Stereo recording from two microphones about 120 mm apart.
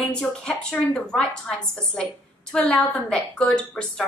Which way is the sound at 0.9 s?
5° left (ahead or behind).